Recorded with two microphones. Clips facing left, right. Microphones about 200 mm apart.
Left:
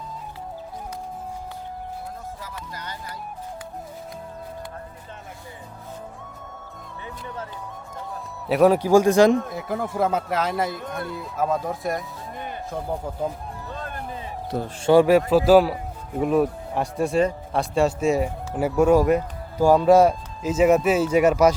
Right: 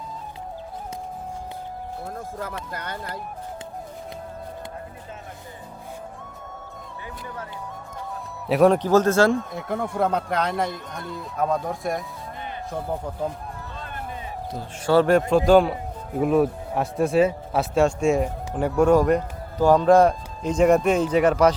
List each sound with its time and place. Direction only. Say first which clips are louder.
2.7 s speech: right 4 dB; 60° right (ahead or behind)
8.4 s a man's voice: even; centre (ahead or behind)
9.5 s speech: even; centre (ahead or behind)
14.8 s a man's voice: left 2 dB; 10° left (ahead or behind)